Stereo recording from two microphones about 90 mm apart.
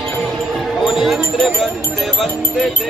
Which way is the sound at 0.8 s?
5° right (ahead or behind).